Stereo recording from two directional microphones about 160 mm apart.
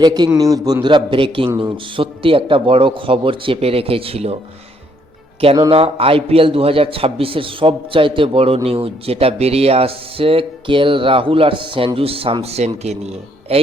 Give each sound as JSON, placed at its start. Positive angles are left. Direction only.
{"t": 0.0, "sound": "a man's voice", "side_deg": -25}
{"t": 5.4, "sound": "speech", "side_deg": -35}